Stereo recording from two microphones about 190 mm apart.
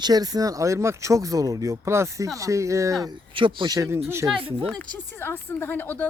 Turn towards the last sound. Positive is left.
turn(degrees=10)  # may be behind; listen again after turning